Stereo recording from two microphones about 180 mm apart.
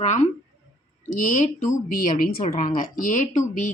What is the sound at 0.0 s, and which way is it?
A woman's voice, 40° left (ahead or behind).